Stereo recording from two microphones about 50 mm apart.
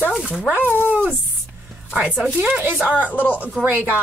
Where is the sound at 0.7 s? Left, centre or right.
Left.